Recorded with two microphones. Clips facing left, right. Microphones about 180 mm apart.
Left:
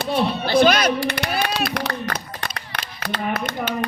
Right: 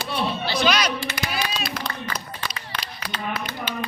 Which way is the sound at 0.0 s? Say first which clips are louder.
Left 5 dB; 50° left (ahead or behind).